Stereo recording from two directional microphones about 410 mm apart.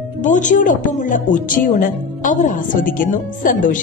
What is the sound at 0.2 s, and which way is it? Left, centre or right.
Speech, centre.